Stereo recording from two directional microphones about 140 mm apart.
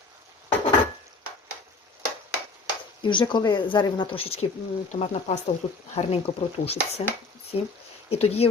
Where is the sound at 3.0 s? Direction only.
35° left (ahead or behind).